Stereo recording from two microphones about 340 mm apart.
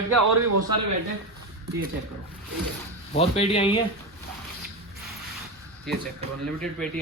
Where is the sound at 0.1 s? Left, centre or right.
Right.